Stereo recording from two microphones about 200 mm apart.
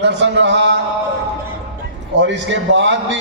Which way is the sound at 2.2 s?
65° right (ahead or behind).